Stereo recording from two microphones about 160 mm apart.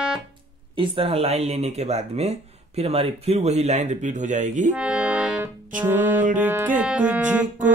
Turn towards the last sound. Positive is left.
turn(degrees=-10)  # may be behind; listen again after turning